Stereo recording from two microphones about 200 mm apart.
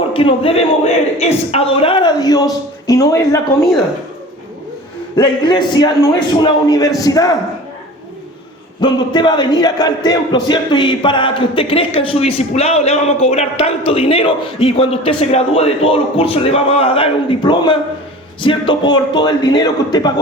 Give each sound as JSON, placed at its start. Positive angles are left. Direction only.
{"t": 0.1, "sound": "speech", "side_deg": 25}
{"t": 5.1, "sound": "a man's voice", "side_deg": 20}
{"t": 8.8, "sound": "speech", "side_deg": 20}